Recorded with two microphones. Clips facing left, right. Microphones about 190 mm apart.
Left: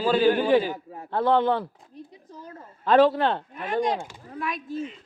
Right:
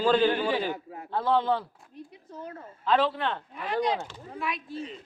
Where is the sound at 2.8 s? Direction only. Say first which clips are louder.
Left 7 dB; 45° left (ahead or behind).